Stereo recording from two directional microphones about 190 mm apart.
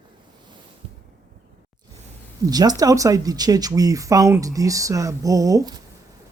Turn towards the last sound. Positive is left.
turn(degrees=-20)  # may be behind; listen again after turning